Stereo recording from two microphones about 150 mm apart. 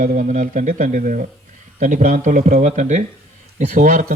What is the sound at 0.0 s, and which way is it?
A man's voice, 60° right (ahead or behind).